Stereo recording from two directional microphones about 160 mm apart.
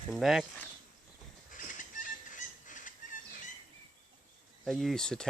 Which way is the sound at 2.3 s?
55° left (ahead or behind).